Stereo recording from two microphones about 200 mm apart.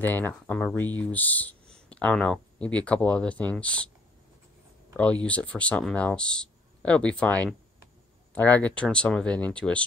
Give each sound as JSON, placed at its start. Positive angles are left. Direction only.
{"t": 0.0, "sound": "speech", "side_deg": 10}
{"t": 4.9, "sound": "speech", "side_deg": 5}